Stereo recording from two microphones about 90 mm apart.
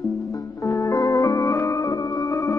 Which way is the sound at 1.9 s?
55° left (ahead or behind).